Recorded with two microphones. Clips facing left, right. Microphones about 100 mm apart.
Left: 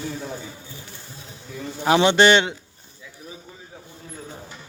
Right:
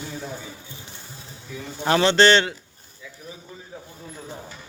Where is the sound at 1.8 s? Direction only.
15° left (ahead or behind).